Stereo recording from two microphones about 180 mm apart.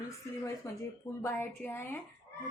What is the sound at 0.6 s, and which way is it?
A woman's voice, 15° left (ahead or behind).